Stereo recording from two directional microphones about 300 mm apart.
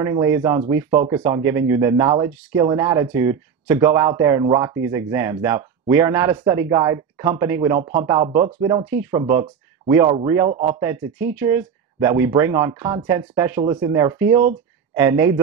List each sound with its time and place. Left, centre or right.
0.0 s speech: centre
0.8 s speech: right
1.1 s speech: centre